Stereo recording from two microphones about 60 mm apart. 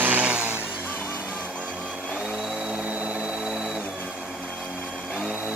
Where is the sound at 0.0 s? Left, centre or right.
Right.